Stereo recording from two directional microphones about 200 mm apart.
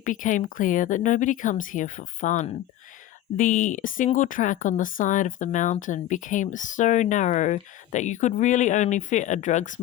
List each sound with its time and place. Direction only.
0.0 s speech: 40° left (ahead or behind)